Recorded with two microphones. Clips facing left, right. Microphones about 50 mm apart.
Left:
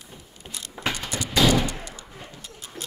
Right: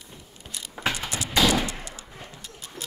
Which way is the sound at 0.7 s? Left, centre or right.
Centre.